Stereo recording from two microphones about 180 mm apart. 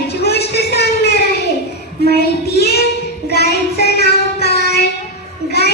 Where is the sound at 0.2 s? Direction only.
65° left (ahead or behind).